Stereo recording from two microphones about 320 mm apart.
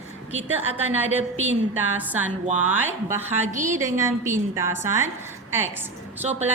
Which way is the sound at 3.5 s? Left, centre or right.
Right.